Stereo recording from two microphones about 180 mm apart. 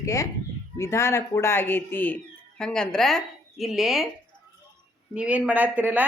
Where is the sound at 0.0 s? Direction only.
15° left (ahead or behind); by 4.0 s centre (ahead or behind).